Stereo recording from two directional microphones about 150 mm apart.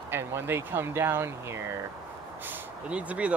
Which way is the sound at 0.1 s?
15° right (ahead or behind).